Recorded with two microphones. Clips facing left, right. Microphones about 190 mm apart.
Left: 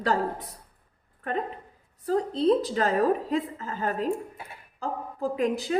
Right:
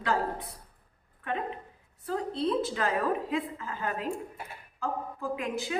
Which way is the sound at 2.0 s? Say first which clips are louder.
Left 7 dB; 40° left (ahead or behind).